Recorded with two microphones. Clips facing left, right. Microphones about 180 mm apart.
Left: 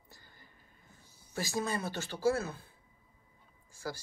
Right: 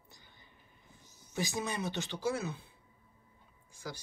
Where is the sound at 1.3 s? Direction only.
20° right (ahead or behind).